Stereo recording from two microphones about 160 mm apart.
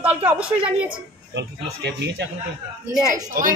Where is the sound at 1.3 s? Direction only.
90° right.